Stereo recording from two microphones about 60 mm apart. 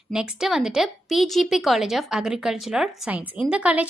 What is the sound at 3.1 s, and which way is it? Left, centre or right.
Speech, right.